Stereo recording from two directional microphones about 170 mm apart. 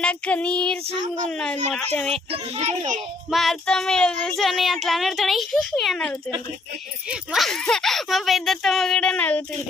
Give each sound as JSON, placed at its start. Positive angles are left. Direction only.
{"t": 0.0, "sound": "child singing", "side_deg": 10}
{"t": 2.3, "sound": "a child's voice", "side_deg": -40}
{"t": 3.2, "sound": "child singing", "side_deg": 0}